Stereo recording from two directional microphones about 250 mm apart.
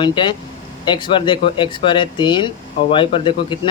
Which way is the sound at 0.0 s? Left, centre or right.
Centre.